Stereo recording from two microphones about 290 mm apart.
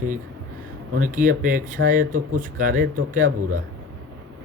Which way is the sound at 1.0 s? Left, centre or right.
Right.